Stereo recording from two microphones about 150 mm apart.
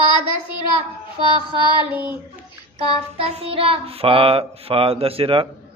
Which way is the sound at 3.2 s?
40° right (ahead or behind).